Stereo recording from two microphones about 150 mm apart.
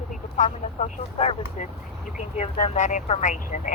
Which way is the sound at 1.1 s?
45° left (ahead or behind).